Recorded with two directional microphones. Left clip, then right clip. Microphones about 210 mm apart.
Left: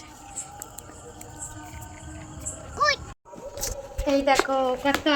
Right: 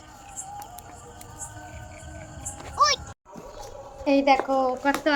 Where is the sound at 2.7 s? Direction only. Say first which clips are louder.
Right 2 dB; 60° right (ahead or behind).